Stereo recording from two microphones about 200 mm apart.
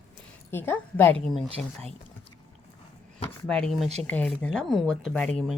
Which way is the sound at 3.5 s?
5° left (ahead or behind).